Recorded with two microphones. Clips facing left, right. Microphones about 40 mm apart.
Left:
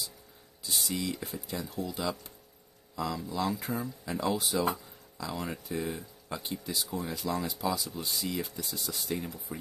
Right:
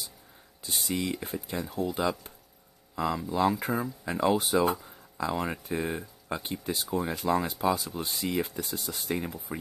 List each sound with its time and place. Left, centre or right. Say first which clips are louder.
0.7 s speech: right 2 dB; right